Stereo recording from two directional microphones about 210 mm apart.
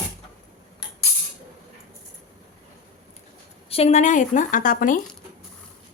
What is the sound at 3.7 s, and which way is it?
A woman's voice, 30° left (ahead or behind).